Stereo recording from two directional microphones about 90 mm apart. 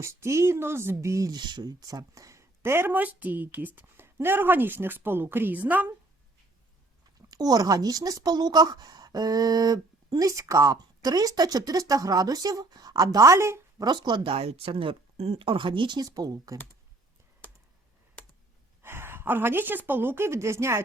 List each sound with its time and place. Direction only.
0.0 s speech: 30° right (ahead or behind)
1.4 s speech: 55° right (ahead or behind); by 5.9 s 20° right (ahead or behind)
7.3 s speech: 45° right (ahead or behind)
13.8 s speech: 55° right (ahead or behind)
14.3 s speech: 90° right; by 16.0 s 60° right (ahead or behind)
16.0 s speech: 40° right (ahead or behind)
18.8 s a woman's voice: 25° right (ahead or behind)